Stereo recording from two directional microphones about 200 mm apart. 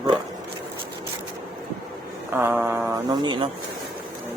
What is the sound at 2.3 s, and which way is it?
Speech, 10° right (ahead or behind).